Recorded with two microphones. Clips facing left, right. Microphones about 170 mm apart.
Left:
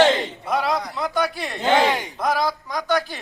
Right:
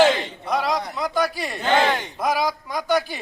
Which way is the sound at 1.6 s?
15° left (ahead or behind).